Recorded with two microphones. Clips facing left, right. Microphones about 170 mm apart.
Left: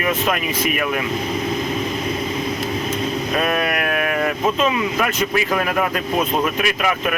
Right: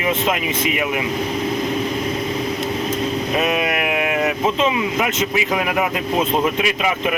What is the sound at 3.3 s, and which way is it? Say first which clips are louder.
Speech: even; 15° right (ahead or behind).